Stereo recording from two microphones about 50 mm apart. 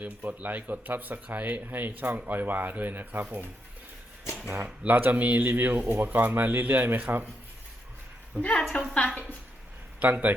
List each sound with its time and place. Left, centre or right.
0.0 s speech: right
8.4 s a woman's voice: right
8.7 s a woman's voice: left
10.0 s speech: right